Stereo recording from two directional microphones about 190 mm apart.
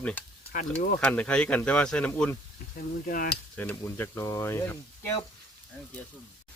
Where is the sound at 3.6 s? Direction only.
10° left (ahead or behind).